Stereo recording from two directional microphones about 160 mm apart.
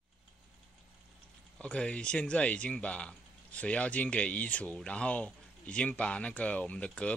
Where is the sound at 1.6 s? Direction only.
5° left (ahead or behind).